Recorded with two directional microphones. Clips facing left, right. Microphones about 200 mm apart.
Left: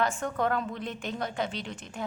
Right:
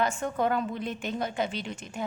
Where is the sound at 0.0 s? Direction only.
Centre (ahead or behind).